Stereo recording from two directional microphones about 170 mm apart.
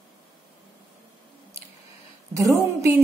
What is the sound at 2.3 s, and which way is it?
Speech, 20° right (ahead or behind).